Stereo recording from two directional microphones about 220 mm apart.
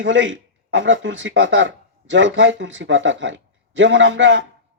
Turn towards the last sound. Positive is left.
turn(degrees=-55)  # may be behind; listen again after turning